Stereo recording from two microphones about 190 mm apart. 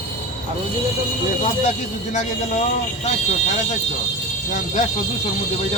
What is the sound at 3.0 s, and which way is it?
Speech, 40° left (ahead or behind).